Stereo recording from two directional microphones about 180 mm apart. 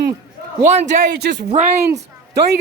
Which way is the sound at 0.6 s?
40° right (ahead or behind).